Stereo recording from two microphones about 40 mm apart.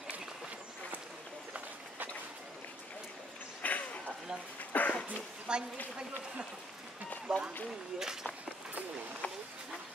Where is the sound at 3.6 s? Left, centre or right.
Left.